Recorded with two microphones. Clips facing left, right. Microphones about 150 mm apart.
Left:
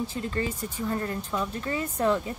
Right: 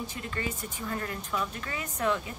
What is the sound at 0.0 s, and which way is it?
Speech, 30° left (ahead or behind).